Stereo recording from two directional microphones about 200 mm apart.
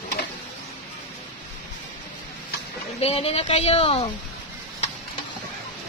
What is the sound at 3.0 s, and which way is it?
A woman's voice, 30° left (ahead or behind).